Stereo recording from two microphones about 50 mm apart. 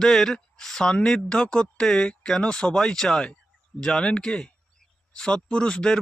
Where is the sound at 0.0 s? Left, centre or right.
Centre.